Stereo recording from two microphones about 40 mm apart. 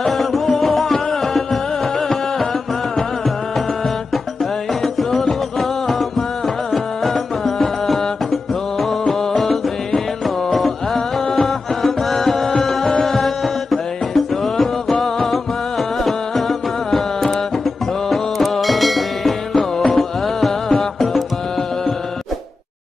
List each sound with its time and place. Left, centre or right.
0.2 s music: centre
4.8 s music: centre